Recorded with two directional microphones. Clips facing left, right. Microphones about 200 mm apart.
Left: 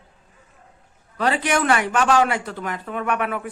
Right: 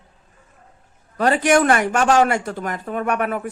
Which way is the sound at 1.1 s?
45° right (ahead or behind).